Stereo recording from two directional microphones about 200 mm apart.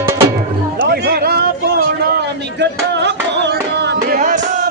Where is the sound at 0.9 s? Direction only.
50° right (ahead or behind).